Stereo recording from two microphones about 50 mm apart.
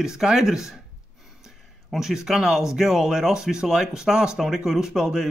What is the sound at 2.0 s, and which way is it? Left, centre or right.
Speech, centre.